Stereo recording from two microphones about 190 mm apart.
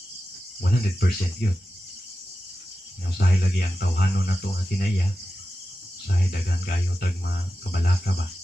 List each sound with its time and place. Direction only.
0.6 s speech: 55° left (ahead or behind)
3.2 s speech: 50° left (ahead or behind)
6.0 s speech: 50° left (ahead or behind)